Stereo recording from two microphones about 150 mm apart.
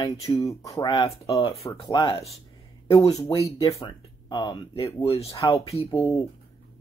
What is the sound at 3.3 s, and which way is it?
Speech, 40° left (ahead or behind).